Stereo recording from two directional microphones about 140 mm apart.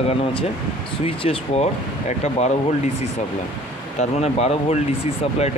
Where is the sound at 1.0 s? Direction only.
45° left (ahead or behind).